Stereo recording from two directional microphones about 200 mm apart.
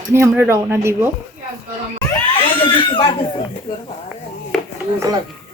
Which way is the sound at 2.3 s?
25° left (ahead or behind).